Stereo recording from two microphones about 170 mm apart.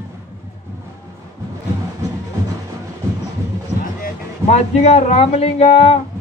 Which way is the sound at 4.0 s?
40° left (ahead or behind).